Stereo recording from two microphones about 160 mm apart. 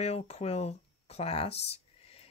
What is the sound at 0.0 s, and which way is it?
Speech, 40° left (ahead or behind).